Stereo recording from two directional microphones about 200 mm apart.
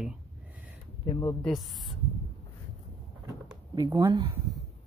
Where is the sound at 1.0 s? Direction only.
25° left (ahead or behind).